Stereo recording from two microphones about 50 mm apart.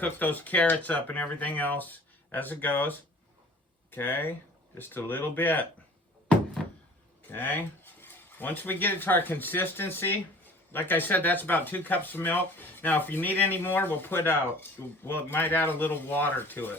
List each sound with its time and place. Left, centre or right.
0.0 s speech: left
3.9 s speech: left
6.6 s a sound: centre
7.3 s speech: left